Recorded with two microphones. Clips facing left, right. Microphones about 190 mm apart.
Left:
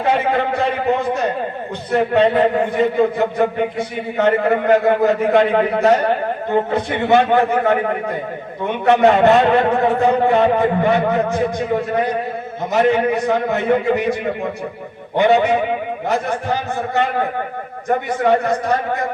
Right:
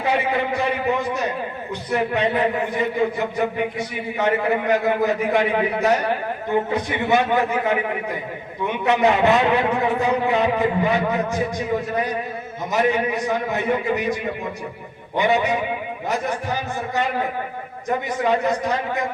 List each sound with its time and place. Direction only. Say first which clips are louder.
0.0 s a sound: left 4 dB; 60° left (ahead or behind)
1.9 s a man's voice: left 6 dB; 60° left (ahead or behind)
12.7 s a man's voice: left 5 dB; 60° left (ahead or behind)
15.2 s a man's voice: left 6 dB; 55° left (ahead or behind)
18.2 s a man's voice: left 3 dB; 55° left (ahead or behind)